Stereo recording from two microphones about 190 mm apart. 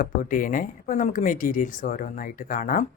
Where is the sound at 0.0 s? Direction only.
45° left (ahead or behind).